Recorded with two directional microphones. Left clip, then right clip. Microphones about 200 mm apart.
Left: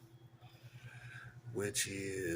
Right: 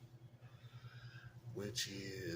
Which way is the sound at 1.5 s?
25° left (ahead or behind).